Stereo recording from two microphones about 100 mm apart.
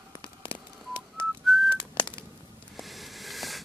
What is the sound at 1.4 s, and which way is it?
Whistling, centre (ahead or behind).